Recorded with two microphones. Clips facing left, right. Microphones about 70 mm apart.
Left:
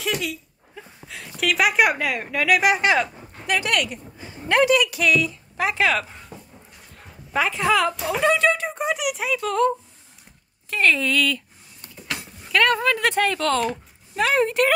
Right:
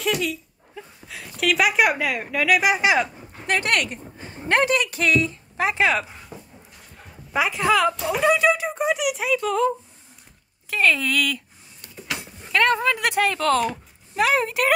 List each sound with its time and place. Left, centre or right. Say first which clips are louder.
0.0 s speech: right 2 dB; centre
3.4 s a woman's voice: even; right; by 6.1 s centre
7.3 s speech: even; centre
12.1 s a sound: even; centre
12.4 s speech: even; right
13.0 s speech: even; centre